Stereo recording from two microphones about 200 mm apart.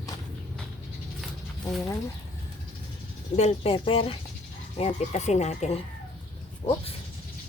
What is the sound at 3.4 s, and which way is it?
Speech, 30° left (ahead or behind).